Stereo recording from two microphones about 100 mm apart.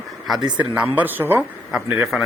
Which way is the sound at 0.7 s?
15° right (ahead or behind).